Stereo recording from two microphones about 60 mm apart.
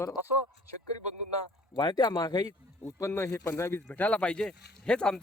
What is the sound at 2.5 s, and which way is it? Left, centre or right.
Speech, left.